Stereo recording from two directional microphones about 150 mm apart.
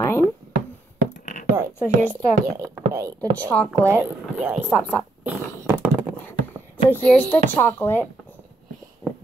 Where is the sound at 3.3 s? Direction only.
10° left (ahead or behind).